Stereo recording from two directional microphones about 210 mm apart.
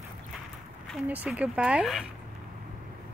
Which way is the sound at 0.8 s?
5° right (ahead or behind).